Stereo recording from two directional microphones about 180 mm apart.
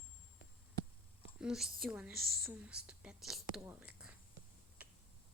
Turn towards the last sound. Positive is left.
turn(degrees=-10)  # may be behind; listen again after turning